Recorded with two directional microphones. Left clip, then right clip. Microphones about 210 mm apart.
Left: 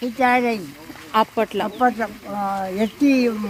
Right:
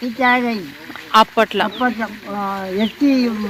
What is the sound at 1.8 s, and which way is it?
A woman's voice, 20° left (ahead or behind).